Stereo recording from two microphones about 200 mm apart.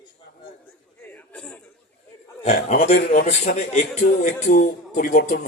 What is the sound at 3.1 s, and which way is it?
Speech, 35° left (ahead or behind).